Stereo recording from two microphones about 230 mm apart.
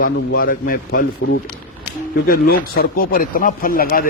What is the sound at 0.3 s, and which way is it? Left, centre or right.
Speech, left.